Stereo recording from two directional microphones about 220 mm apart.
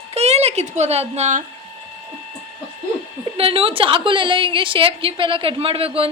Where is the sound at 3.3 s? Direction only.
25° right (ahead or behind).